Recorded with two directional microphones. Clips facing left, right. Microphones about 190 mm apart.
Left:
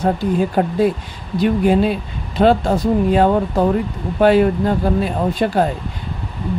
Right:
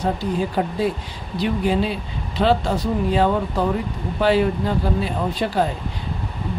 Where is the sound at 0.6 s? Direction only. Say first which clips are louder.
Left 5 dB; 50° left (ahead or behind).